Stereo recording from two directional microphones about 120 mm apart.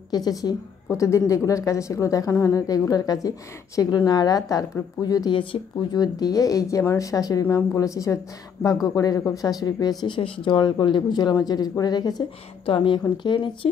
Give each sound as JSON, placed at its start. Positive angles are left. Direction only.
{"t": 0.1, "sound": "a woman's voice", "side_deg": 30}
{"t": 12.6, "sound": "speech", "side_deg": 45}